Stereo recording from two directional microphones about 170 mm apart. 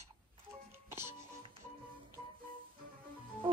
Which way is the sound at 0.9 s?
15° right (ahead or behind).